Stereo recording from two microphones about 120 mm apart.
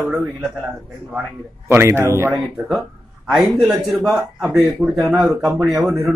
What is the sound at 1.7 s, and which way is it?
Speech, 20° right (ahead or behind).